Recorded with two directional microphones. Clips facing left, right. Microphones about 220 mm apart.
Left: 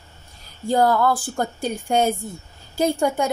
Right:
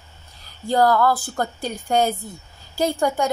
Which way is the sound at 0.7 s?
20° left (ahead or behind).